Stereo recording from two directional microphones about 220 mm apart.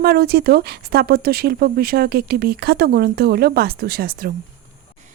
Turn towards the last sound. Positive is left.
turn(degrees=-40)  # may be behind; listen again after turning